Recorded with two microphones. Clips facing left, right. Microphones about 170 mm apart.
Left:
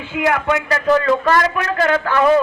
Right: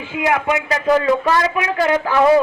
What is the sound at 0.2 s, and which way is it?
A man's voice, 15° right (ahead or behind).